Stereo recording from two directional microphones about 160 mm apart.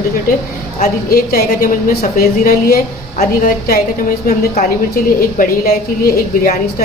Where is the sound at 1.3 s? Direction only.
60° left (ahead or behind).